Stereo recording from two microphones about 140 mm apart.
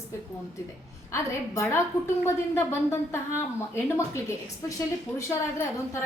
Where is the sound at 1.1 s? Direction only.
20° left (ahead or behind).